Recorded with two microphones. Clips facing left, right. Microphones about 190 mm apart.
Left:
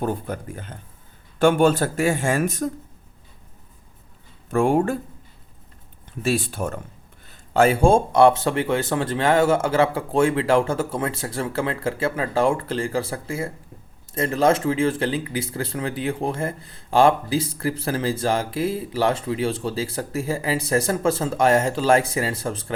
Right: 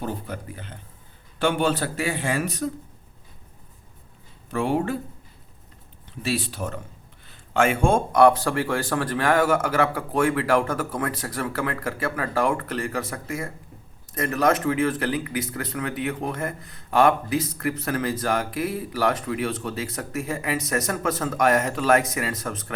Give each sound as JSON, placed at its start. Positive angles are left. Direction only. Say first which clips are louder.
{"t": 0.0, "sound": "speech", "louder": "left 5 dB", "side_deg": 50}
{"t": 4.5, "sound": "speech", "louder": "left 5 dB", "side_deg": 50}
{"t": 6.2, "sound": "speech", "louder": "left 4 dB", "side_deg": 50}
{"t": 7.5, "sound": "speech", "louder": "left 4 dB", "side_deg": 35}